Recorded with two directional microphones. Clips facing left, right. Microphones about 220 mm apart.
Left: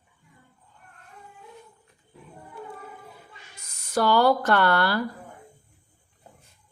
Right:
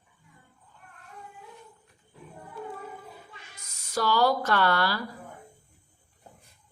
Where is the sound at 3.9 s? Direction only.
55° left (ahead or behind).